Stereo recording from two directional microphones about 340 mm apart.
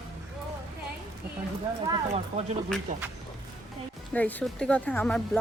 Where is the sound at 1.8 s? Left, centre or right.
Centre.